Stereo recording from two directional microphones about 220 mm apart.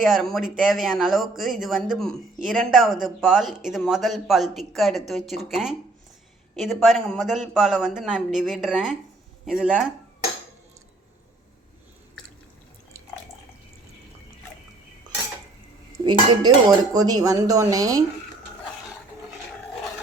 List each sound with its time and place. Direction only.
0.0 s speech: centre (ahead or behind)
16.0 s dishes: 20° right (ahead or behind)
16.6 s speech: 15° right (ahead or behind)